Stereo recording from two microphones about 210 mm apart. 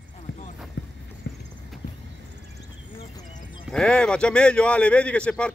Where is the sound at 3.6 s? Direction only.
5° left (ahead or behind).